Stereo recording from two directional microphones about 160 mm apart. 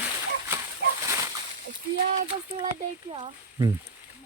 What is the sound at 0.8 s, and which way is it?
Bird, 90° right.